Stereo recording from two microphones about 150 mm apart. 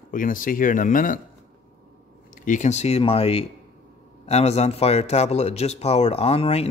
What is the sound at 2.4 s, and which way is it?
Speech, 55° left (ahead or behind).